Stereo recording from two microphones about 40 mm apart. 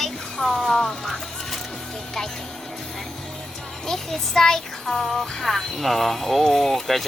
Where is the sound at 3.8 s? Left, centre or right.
Centre.